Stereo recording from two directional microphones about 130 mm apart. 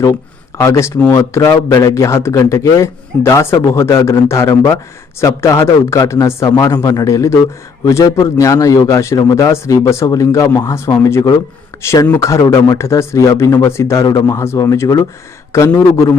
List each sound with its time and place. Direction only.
0.6 s speech: 20° left (ahead or behind)